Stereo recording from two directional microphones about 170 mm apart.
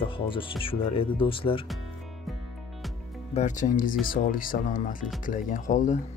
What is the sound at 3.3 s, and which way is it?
Speech, 45° left (ahead or behind).